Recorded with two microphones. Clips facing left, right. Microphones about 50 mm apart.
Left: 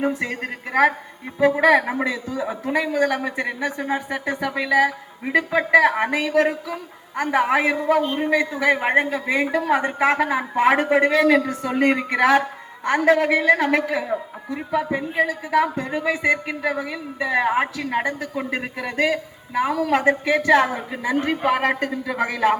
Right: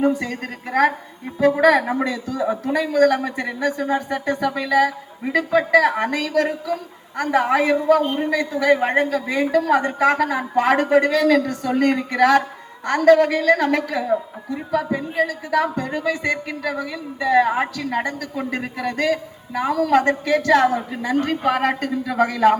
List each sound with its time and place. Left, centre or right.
0.0 s a man's voice: centre